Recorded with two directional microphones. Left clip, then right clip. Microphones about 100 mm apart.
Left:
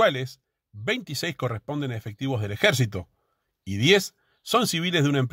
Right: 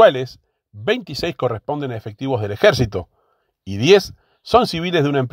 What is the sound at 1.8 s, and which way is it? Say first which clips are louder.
Speech: right 6 dB; 35° left (ahead or behind).